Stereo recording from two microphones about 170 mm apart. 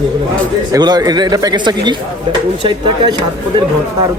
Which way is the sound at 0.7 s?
25° right (ahead or behind).